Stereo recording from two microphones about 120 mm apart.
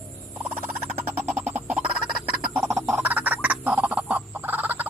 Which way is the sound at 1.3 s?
15° right (ahead or behind).